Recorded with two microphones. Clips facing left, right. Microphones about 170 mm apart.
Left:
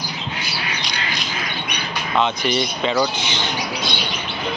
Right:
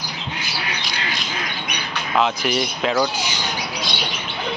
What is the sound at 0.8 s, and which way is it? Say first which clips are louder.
Squawk: left 1 dB; 5° right (ahead or behind).